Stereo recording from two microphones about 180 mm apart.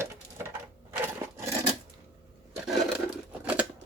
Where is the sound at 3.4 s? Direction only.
10° right (ahead or behind).